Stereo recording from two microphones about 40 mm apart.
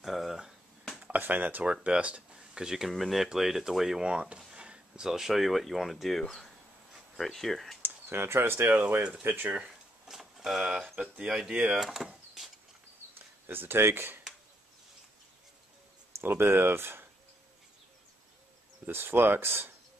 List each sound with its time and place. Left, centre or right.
0.0 s finger snapping: centre
1.1 s speech: right
1.6 s speech: right; by 2.9 s centre
2.9 s speech: centre
4.0 s speech: right
4.6 s a sound: right
5.0 s speech: centre
7.8 s speech: right
10.0 s vehicle: centre
11.2 s speech: centre
11.8 s speech: centre
13.5 s speech: right
16.2 s speech: right
18.9 s speech: right